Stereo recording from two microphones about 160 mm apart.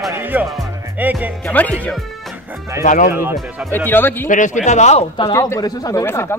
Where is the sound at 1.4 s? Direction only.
10° left (ahead or behind).